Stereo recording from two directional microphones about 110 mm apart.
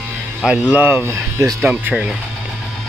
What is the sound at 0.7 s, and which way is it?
Speech, 15° right (ahead or behind).